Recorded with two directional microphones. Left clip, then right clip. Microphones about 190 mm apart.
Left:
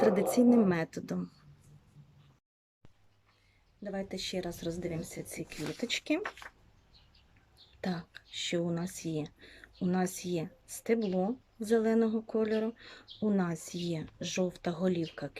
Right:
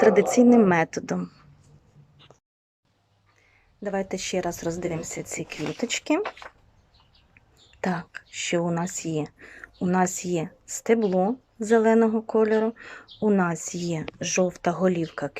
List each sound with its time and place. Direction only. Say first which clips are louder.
0.0 s speech: right 9 dB; 20° left (ahead or behind)
3.8 s speech: right 9 dB; 20° left (ahead or behind)
6.2 s speech: right 7 dB; 15° right (ahead or behind)
7.8 s speech: right 10 dB; 20° left (ahead or behind)